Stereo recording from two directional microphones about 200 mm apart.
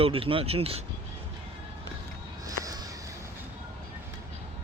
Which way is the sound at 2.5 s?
15° right (ahead or behind).